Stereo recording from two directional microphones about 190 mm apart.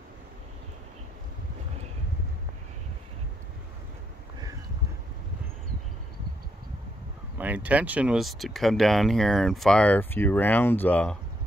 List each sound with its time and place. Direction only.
7.3 s speech: 10° right (ahead or behind); by 11.1 s 5° left (ahead or behind)